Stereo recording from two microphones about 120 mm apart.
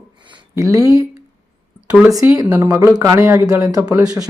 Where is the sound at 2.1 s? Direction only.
30° right (ahead or behind).